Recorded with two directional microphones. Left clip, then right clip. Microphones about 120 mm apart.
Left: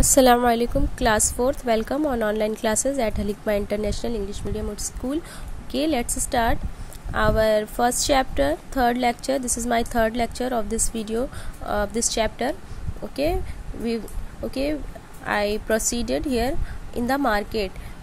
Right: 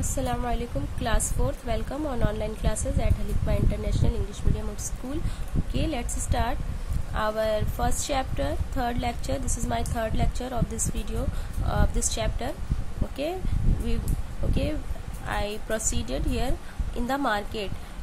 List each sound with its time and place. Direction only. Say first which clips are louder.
0.4 s a woman's voice: left 11 dB; 90° left; by 4.5 s 45° left (ahead or behind)
5.7 s a woman's voice: left 8 dB; 55° left (ahead or behind)
14.5 s speech: left 5 dB; 40° left (ahead or behind)
15.2 s a woman's voice: left 8 dB; 50° left (ahead or behind)